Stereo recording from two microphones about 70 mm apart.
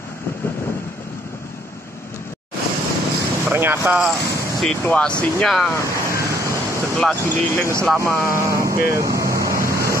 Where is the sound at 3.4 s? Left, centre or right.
Right.